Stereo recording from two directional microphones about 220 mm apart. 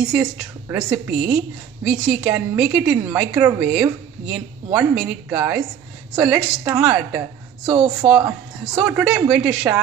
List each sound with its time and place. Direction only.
0.1 s a woman's voice: 5° right (ahead or behind)
7.7 s a woman's voice: 20° right (ahead or behind)
8.8 s a woman's voice: 5° right (ahead or behind)